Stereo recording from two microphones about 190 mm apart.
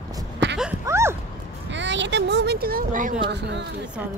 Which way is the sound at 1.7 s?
70° right (ahead or behind).